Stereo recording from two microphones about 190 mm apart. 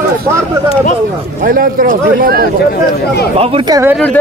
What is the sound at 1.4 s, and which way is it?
A man's voice, 50° right (ahead or behind).